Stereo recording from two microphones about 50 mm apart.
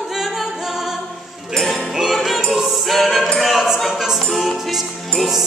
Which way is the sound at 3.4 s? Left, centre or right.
Centre.